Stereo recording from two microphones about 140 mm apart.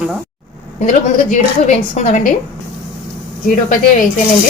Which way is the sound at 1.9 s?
65° left (ahead or behind).